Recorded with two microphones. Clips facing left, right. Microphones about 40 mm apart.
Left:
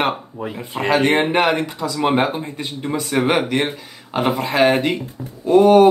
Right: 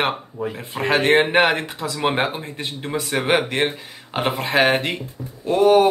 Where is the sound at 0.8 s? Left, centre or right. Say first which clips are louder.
Even; right.